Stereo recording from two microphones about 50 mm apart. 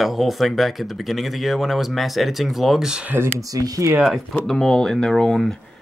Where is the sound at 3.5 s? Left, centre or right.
Right.